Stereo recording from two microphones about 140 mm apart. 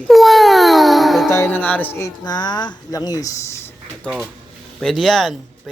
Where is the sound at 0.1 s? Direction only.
Centre (ahead or behind).